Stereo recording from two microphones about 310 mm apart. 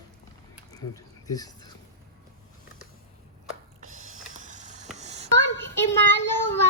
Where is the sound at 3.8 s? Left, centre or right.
Right.